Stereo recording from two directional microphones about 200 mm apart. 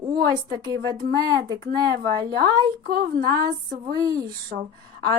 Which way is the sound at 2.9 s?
50° right (ahead or behind).